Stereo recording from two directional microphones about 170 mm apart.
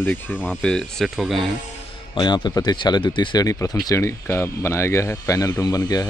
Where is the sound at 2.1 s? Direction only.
25° left (ahead or behind).